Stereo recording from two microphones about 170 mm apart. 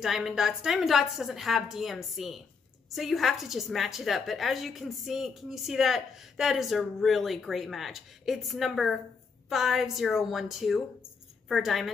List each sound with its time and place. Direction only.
0.0 s a woman's voice: 5° right (ahead or behind)